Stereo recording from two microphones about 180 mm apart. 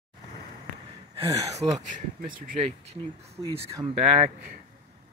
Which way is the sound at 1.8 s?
45° right (ahead or behind).